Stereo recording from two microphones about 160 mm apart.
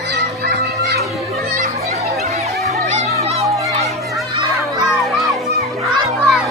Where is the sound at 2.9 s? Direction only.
40° right (ahead or behind).